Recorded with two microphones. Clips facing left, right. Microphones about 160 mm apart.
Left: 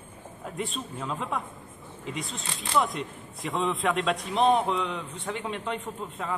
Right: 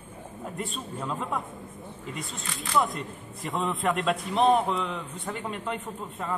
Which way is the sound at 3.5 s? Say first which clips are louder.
Left 1 dB; centre (ahead or behind).